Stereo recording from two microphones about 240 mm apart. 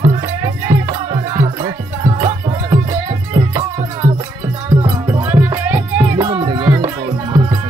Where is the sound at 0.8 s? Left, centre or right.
Centre.